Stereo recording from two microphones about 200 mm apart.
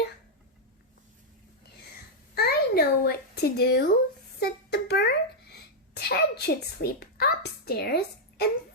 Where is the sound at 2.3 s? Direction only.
50° left (ahead or behind).